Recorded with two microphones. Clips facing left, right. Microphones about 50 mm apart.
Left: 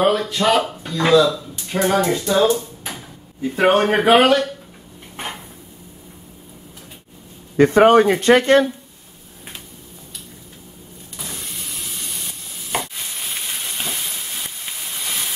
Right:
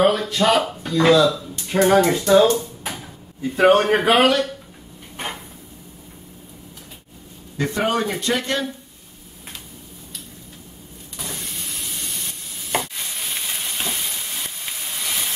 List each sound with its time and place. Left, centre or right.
0.0 s speech: centre
3.4 s a man's voice: centre
7.5 s speech: left
11.1 s stir: centre